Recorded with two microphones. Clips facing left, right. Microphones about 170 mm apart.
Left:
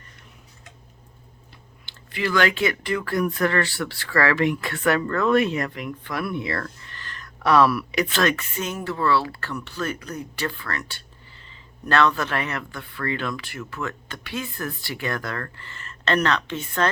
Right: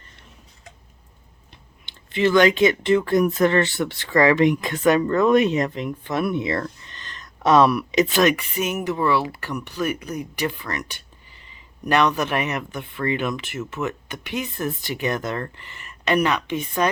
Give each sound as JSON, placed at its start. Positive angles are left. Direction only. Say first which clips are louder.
{"t": 1.9, "sound": "speech", "louder": "right 7 dB", "side_deg": -20}